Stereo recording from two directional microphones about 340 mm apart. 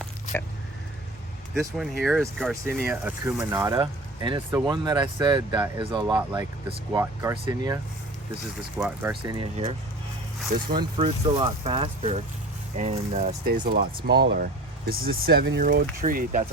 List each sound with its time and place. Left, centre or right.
1.6 s speech: centre
8.8 s speech: centre
10.8 s speech: centre